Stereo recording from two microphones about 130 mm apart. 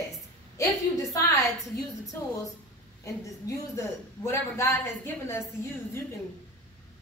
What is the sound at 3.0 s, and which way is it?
A man's voice, 25° left (ahead or behind).